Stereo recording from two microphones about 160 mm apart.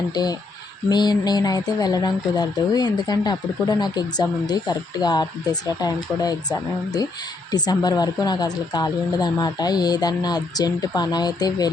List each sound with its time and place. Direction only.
0.1 s speech: 25° left (ahead or behind)